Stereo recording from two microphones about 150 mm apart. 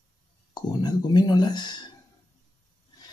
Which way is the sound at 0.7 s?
30° left (ahead or behind).